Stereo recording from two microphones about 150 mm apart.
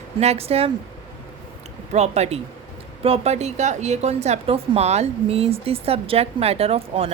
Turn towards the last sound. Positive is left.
turn(degrees=-40)  # may be behind; listen again after turning